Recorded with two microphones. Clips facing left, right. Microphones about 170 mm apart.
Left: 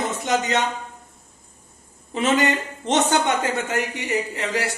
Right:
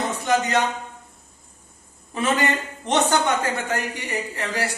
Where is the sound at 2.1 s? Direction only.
20° left (ahead or behind).